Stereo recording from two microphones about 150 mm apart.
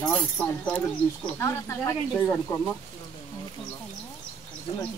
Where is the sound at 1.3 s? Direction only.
20° left (ahead or behind).